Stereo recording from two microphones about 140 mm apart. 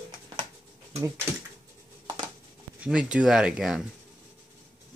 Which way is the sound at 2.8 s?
5° right (ahead or behind).